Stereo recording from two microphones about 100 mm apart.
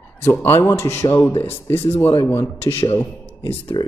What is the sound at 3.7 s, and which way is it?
Speech, 40° left (ahead or behind).